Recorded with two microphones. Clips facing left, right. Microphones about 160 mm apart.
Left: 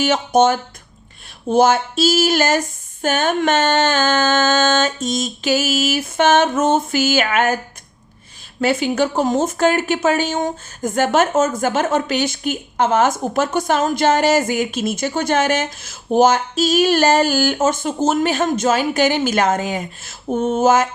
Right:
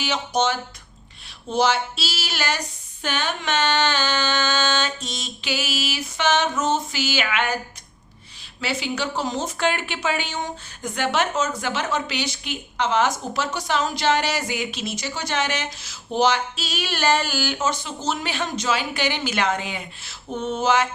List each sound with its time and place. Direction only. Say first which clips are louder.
0.0 s speech: left 8 dB; 50° left (ahead or behind)
8.6 s speech: left 9 dB; 50° left (ahead or behind)